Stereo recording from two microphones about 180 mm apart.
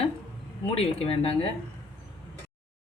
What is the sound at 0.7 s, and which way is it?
Speech, 35° left (ahead or behind).